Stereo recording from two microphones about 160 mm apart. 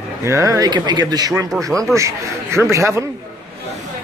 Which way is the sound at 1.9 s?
20° right (ahead or behind).